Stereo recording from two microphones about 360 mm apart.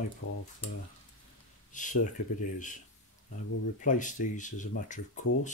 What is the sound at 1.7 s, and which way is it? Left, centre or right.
Speech, left.